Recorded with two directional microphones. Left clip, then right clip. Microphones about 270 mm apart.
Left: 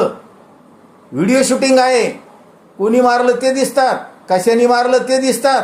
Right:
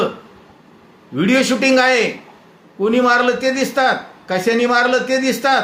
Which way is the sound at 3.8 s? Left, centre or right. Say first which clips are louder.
Left 2 dB; centre.